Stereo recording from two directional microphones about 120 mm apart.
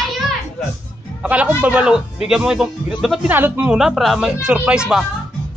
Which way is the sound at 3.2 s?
15° right (ahead or behind).